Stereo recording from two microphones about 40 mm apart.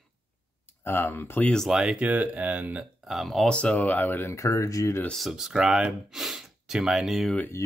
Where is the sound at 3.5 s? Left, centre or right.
Left.